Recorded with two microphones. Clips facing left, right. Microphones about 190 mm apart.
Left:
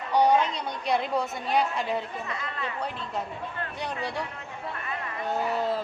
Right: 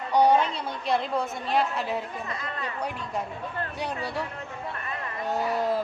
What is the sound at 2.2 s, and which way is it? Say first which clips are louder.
Speech: even; 40° right (ahead or behind).